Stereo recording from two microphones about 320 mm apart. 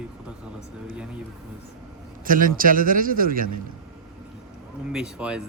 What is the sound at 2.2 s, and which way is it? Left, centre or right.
A man's voice, right.